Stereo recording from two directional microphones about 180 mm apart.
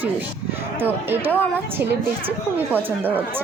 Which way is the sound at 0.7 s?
10° right (ahead or behind).